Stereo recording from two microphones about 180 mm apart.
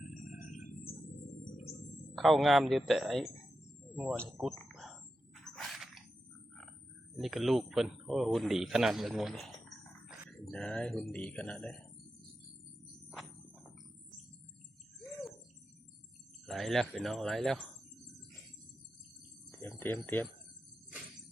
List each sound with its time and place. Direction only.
0.3 s a sound: 50° left (ahead or behind)
2.1 s a man's voice: centre (ahead or behind)
4.2 s a sound: 5° left (ahead or behind)
7.2 s speech: centre (ahead or behind)
16.5 s a man's voice: centre (ahead or behind)
19.5 s cricket: 10° left (ahead or behind)